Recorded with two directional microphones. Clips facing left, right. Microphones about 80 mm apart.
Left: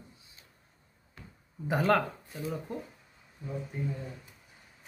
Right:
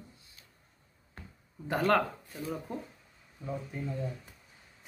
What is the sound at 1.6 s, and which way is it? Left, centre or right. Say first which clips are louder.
Speech: left 1 dB; centre.